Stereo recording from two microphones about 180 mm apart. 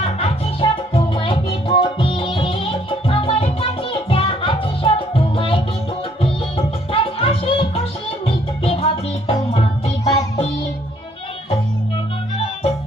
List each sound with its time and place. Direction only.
0.0 s music: 30° left (ahead or behind)